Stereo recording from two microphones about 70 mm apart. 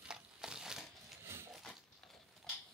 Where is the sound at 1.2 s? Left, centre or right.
Right.